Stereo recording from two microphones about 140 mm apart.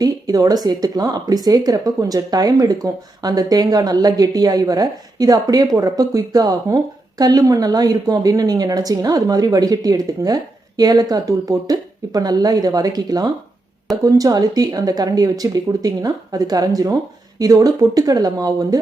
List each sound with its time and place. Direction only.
0.0 s speech: 25° right (ahead or behind)